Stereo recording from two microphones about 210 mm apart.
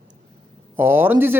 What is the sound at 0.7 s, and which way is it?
Speech, 10° right (ahead or behind).